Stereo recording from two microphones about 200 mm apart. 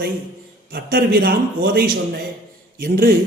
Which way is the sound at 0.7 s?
50° right (ahead or behind).